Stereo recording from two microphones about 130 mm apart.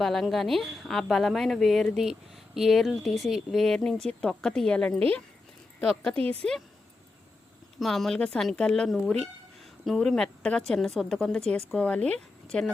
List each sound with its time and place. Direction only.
0.0 s a woman's voice: centre (ahead or behind)
6.1 s speech: 50° right (ahead or behind)
7.8 s a woman's voice: centre (ahead or behind)